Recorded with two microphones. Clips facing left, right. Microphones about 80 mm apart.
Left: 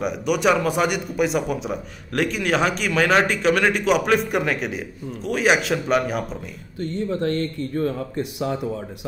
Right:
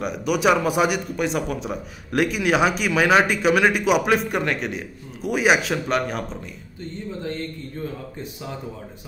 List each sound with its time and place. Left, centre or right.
0.0 s a man's voice: centre
6.8 s speech: left